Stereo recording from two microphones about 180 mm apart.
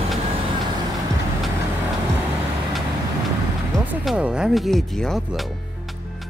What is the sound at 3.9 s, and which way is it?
Speech, 5° right (ahead or behind).